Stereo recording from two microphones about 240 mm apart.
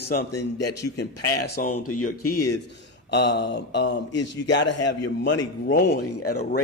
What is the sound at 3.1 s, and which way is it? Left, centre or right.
Speech, left.